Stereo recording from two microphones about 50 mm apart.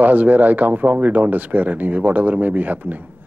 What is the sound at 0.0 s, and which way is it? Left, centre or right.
Speech, right.